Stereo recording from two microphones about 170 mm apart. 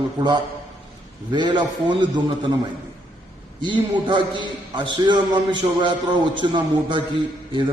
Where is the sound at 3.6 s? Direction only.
30° right (ahead or behind).